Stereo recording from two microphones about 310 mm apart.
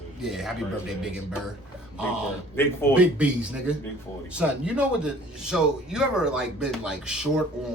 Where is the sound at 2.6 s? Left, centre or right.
Centre.